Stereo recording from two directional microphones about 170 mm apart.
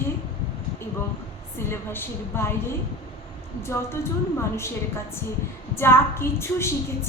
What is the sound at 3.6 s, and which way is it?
A woman's voice, 15° left (ahead or behind).